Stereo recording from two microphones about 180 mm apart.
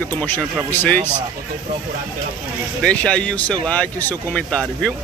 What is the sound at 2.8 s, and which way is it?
Speech, 5° left (ahead or behind).